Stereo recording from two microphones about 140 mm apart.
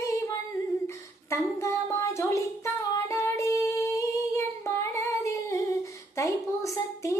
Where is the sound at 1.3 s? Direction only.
20° left (ahead or behind).